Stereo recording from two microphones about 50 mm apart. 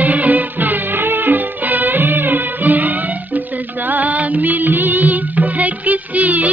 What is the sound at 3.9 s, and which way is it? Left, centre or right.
Music, right.